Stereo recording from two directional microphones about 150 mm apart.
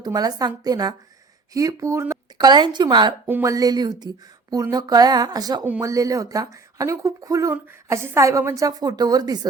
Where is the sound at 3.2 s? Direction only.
15° right (ahead or behind).